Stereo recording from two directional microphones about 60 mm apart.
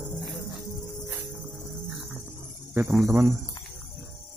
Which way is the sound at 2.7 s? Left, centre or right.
Right.